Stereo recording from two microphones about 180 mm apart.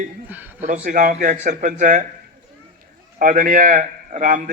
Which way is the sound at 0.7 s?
45° right (ahead or behind).